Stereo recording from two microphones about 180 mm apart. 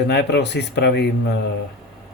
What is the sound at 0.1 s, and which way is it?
Speech, 70° left (ahead or behind).